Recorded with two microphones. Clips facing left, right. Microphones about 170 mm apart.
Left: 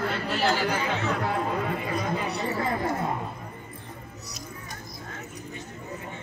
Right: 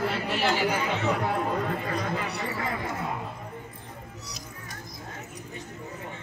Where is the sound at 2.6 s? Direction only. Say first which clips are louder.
Left 5 dB; 40° left (ahead or behind).